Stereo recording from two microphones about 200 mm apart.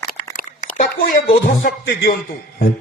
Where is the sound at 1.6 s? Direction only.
50° left (ahead or behind).